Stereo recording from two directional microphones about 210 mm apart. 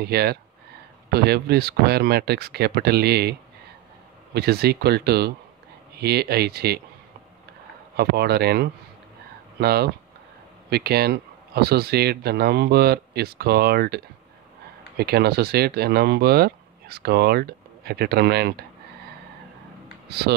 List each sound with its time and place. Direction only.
0.0 s speech: 50° right (ahead or behind)
7.9 s speech: 50° right (ahead or behind)